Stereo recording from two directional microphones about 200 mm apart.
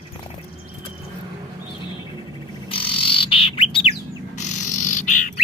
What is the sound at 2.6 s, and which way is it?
Bird, 25° left (ahead or behind).